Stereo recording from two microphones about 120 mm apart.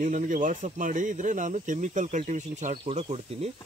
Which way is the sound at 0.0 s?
90° right.